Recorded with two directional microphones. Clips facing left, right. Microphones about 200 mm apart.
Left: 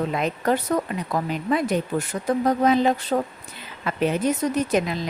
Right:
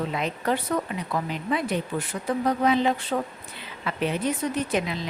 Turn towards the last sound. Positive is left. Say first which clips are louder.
# left 4 dB
turn(degrees=45)  # may be behind; listen again after turning